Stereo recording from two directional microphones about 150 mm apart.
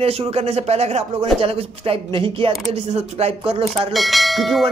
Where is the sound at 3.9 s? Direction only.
Centre (ahead or behind).